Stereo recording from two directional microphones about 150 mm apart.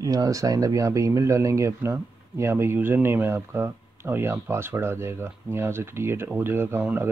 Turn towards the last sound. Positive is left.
turn(degrees=-15)  # may be behind; listen again after turning